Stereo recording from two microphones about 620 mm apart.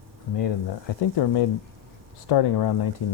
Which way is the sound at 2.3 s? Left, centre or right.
Left.